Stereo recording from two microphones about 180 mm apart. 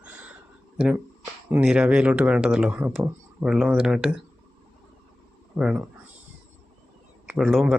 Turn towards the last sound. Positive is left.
turn(degrees=0)  # may be behind; listen again after turning